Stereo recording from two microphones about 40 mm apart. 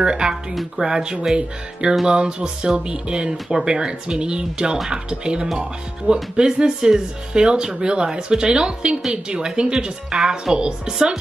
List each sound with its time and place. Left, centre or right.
0.0 s speech: centre